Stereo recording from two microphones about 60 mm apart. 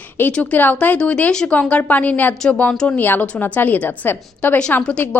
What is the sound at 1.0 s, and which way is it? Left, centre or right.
A woman's voice, centre.